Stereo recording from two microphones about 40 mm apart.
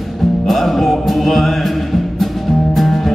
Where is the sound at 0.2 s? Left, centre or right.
Centre.